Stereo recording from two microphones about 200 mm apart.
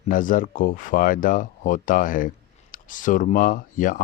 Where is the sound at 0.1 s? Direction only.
40° left (ahead or behind).